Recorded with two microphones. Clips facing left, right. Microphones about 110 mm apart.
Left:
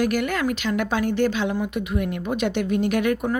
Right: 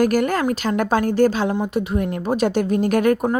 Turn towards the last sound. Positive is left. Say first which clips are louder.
# right 4 dB
turn(degrees=-40)  # may be behind; listen again after turning